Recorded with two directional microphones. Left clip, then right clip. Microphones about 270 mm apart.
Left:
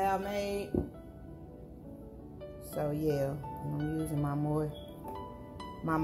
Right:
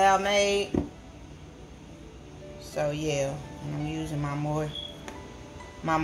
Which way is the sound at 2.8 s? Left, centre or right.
Centre.